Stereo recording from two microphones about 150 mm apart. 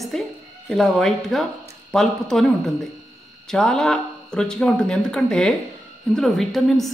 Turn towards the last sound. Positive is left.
turn(degrees=0)  # may be behind; listen again after turning